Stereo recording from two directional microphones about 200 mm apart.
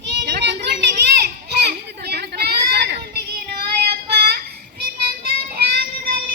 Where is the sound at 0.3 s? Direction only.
55° right (ahead or behind).